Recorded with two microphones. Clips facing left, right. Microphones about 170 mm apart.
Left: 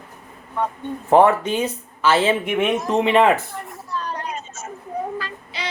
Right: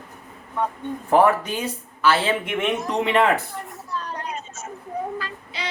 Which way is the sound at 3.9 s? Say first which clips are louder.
Left 3 dB; 90° left.